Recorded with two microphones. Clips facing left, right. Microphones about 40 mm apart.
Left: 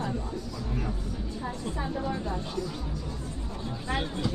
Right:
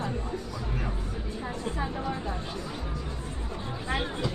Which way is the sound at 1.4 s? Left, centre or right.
Centre.